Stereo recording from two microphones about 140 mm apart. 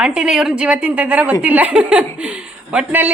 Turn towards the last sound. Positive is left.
turn(degrees=-10)  # may be behind; listen again after turning